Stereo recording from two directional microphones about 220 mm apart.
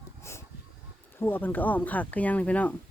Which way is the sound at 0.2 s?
10° left (ahead or behind).